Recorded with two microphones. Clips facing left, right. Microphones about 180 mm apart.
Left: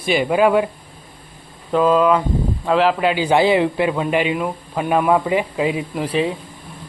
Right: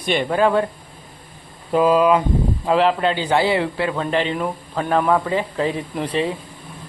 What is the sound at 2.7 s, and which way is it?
A man's voice, centre (ahead or behind).